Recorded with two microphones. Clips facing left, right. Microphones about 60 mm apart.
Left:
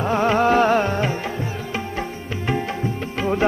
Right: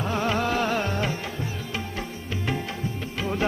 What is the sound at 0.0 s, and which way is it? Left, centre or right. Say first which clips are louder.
Music: left 7 dB; left.